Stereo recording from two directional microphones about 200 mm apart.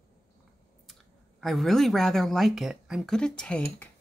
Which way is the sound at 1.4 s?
Centre (ahead or behind).